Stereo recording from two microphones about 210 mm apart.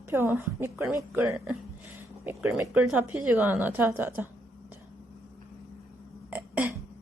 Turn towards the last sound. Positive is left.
turn(degrees=-5)  # may be behind; listen again after turning